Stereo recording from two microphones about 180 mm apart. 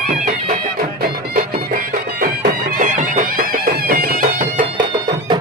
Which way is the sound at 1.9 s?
55° right (ahead or behind).